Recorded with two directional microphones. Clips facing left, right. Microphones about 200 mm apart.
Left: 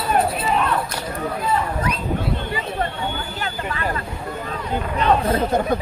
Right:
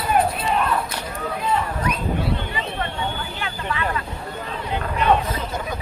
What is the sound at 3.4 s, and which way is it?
Vehicle, 40° left (ahead or behind).